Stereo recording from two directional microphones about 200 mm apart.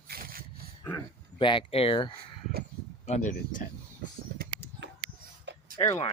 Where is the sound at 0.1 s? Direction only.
45° right (ahead or behind).